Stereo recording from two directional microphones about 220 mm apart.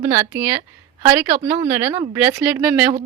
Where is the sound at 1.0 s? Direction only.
20° right (ahead or behind).